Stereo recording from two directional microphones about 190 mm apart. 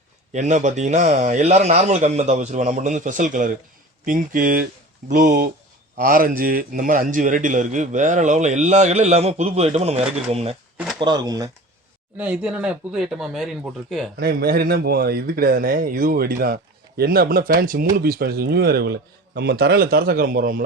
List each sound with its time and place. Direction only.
0.3 s a man's voice: 40° right (ahead or behind)
11.0 s speech: 20° right (ahead or behind)
12.1 s speech: 5° right (ahead or behind)
14.2 s a man's voice: 55° right (ahead or behind)